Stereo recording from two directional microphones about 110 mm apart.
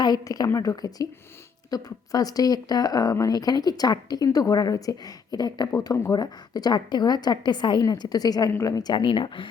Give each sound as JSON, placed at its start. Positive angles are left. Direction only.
{"t": 0.0, "sound": "speech", "side_deg": 35}